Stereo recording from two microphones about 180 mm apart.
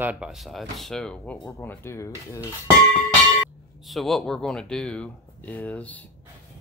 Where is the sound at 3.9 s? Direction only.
Centre (ahead or behind).